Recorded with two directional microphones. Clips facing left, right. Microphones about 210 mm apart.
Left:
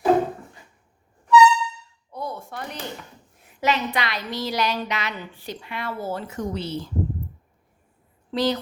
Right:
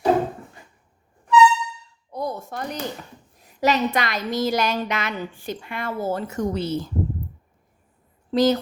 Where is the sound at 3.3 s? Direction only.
35° right (ahead or behind).